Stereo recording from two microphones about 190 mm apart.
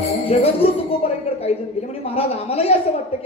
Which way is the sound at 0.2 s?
30° left (ahead or behind).